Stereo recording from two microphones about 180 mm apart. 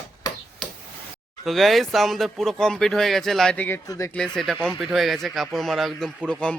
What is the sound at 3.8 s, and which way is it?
Speech, 20° left (ahead or behind).